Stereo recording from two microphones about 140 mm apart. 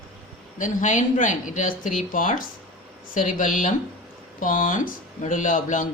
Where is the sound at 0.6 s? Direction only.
65° left (ahead or behind).